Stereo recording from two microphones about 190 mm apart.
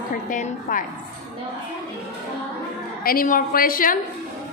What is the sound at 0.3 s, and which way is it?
Speech, 45° left (ahead or behind).